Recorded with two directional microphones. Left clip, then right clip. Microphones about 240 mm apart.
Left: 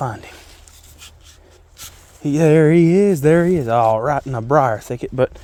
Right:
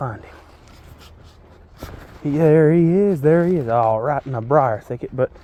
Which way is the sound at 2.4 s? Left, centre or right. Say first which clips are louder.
Left 1 dB; left.